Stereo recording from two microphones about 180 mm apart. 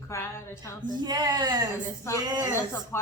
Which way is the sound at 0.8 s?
25° right (ahead or behind).